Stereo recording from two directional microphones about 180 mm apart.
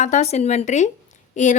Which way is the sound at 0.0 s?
40° left (ahead or behind).